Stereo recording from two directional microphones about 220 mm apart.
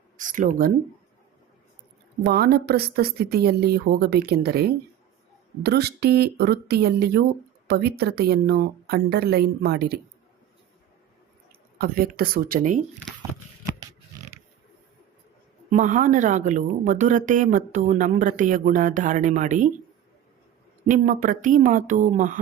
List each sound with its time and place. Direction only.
0.2 s speech: 35° right (ahead or behind)
2.2 s speech: 45° right (ahead or behind)
11.8 s speech: 40° right (ahead or behind)
15.7 s speech: 35° right (ahead or behind)
20.8 s speech: 35° right (ahead or behind)